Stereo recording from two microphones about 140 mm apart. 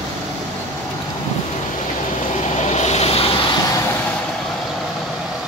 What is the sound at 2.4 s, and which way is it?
Vehicle, 55° left (ahead or behind).